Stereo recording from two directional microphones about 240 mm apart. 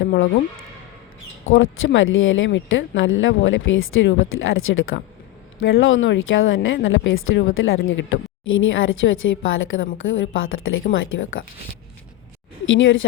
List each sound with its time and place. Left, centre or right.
0.0 s a sound: left
1.5 s speech: left
12.6 s speech: left